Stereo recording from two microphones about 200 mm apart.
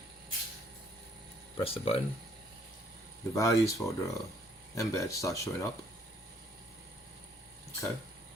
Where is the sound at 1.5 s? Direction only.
30° left (ahead or behind).